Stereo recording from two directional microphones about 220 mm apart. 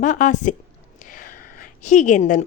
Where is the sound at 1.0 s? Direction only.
35° left (ahead or behind).